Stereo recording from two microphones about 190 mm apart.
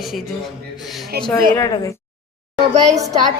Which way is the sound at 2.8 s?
20° right (ahead or behind).